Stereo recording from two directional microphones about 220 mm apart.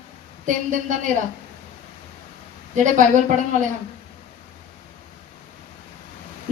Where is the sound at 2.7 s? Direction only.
35° right (ahead or behind).